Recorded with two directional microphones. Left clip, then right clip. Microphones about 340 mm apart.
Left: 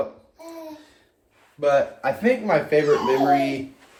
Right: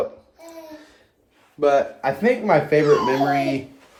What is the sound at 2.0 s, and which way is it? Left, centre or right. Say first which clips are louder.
Speech: right 1 dB; centre.